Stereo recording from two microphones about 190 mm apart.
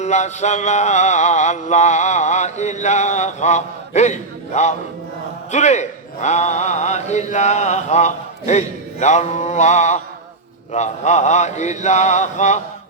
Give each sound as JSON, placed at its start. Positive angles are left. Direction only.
{"t": 0.0, "sound": "mantra", "side_deg": 35}